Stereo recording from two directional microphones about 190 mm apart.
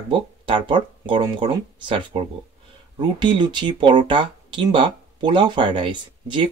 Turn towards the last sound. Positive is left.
turn(degrees=-25)  # may be behind; listen again after turning